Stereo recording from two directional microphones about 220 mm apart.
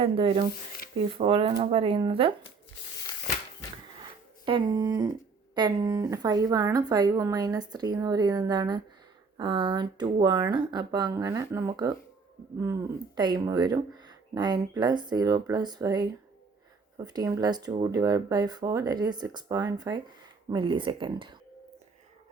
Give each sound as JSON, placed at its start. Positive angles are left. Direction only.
{"t": 0.0, "sound": "speech", "side_deg": -25}
{"t": 4.4, "sound": "speech", "side_deg": -20}